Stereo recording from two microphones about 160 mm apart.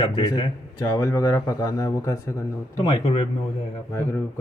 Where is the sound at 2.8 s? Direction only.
30° left (ahead or behind).